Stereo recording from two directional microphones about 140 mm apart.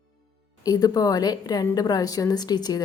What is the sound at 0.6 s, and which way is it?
A woman's voice, 25° left (ahead or behind).